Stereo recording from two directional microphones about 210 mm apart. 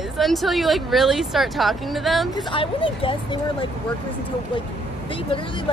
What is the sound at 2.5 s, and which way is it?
Speech, 25° left (ahead or behind).